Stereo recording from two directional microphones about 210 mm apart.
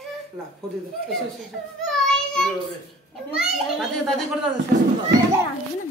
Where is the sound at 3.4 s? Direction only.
Centre (ahead or behind).